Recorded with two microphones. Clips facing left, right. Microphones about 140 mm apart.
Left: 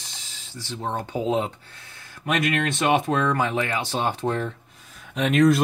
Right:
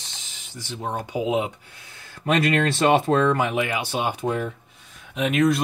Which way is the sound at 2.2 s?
30° right (ahead or behind).